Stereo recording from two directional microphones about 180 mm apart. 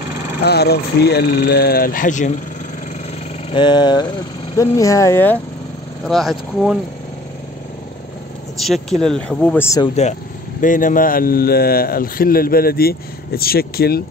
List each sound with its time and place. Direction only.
0.4 s speech: 65° left (ahead or behind); by 2.3 s 45° left (ahead or behind)
3.5 s a sound: 25° left (ahead or behind)
4.6 s speech: 15° left (ahead or behind)
6.0 s speech: centre (ahead or behind)
8.5 s speech: centre (ahead or behind)
10.6 s speech: 45° left (ahead or behind)